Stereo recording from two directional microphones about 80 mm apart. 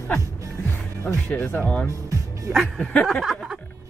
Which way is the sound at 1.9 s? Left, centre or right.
Right.